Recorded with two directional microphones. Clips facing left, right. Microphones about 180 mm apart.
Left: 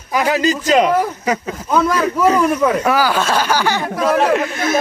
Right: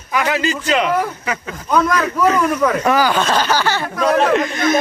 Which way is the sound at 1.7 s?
5° left (ahead or behind).